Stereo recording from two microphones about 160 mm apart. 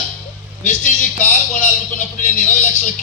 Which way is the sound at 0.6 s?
50° left (ahead or behind).